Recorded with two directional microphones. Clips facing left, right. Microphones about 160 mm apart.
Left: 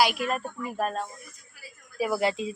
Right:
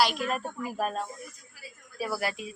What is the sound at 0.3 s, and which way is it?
Speech, centre (ahead or behind).